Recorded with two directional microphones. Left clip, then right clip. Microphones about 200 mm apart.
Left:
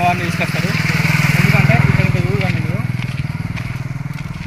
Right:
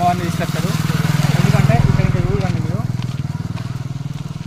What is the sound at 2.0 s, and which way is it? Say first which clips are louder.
Vehicle: left 2 dB; 25° left (ahead or behind).